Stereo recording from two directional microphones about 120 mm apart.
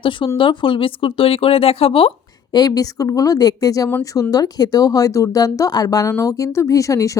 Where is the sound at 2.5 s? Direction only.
30° left (ahead or behind).